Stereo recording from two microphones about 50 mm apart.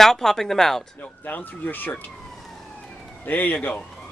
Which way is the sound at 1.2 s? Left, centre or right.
Left.